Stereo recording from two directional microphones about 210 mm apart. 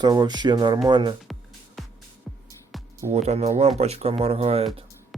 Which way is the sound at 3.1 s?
30° right (ahead or behind).